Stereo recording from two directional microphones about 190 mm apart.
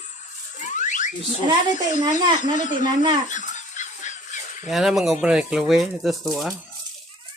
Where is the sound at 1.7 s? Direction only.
40° left (ahead or behind).